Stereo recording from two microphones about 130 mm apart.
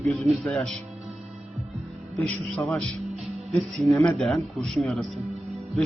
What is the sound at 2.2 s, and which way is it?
Speech, 20° left (ahead or behind).